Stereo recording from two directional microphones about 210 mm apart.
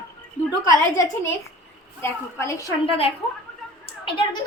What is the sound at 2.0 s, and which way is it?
Speech, 15° left (ahead or behind).